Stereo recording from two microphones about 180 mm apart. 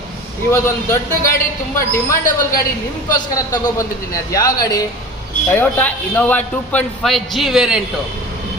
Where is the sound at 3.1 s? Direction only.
20° left (ahead or behind); by 7.8 s 5° right (ahead or behind).